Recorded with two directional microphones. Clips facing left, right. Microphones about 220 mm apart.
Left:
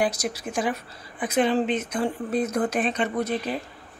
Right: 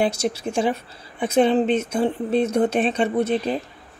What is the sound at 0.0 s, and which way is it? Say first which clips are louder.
A woman's voice: right 4 dB; 25° right (ahead or behind).